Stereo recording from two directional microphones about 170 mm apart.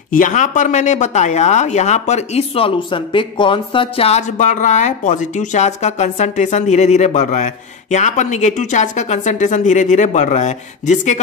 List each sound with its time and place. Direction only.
0.1 s speech: 50° left (ahead or behind)